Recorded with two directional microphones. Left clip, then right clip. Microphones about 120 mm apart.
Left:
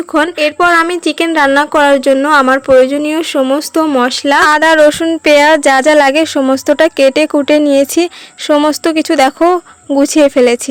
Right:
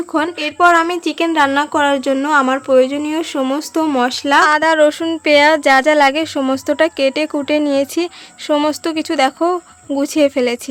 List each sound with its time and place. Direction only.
0.1 s speech: 45° left (ahead or behind)